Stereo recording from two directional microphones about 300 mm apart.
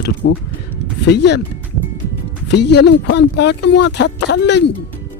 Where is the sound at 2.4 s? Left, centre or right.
Left.